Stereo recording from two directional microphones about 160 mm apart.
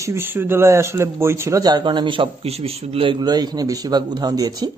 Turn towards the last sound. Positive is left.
turn(degrees=-25)  # may be behind; listen again after turning